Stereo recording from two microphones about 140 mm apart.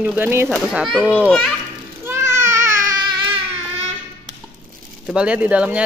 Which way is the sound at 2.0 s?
20° right (ahead or behind).